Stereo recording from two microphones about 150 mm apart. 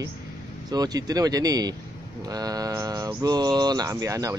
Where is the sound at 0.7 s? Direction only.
25° right (ahead or behind).